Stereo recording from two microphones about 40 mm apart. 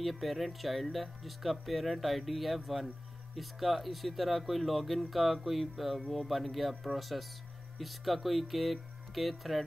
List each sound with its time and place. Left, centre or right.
0.0 s speech: centre